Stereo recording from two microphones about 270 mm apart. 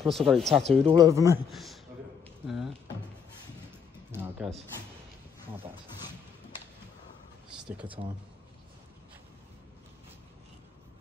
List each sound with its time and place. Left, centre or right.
0.0 s speech: centre
0.8 s speech: centre
1.5 s a man's voice: centre
2.2 s a sound: centre
4.1 s a sound: centre
7.8 s speech: centre